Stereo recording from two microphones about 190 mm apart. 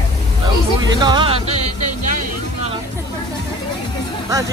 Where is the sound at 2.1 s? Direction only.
45° right (ahead or behind).